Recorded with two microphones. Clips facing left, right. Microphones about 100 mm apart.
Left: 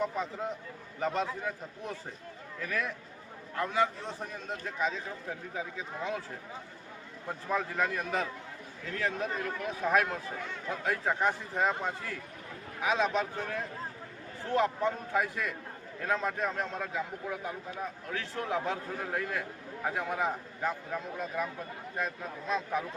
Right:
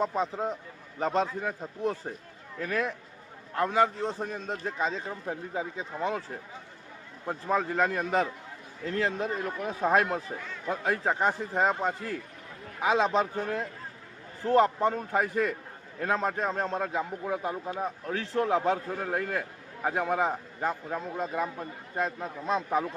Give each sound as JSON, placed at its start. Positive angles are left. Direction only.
{"t": 0.0, "sound": "a man's voice", "side_deg": -30}
{"t": 7.3, "sound": "a man's voice", "side_deg": -30}
{"t": 13.0, "sound": "a man's voice", "side_deg": -30}
{"t": 17.7, "sound": "a man's voice", "side_deg": -35}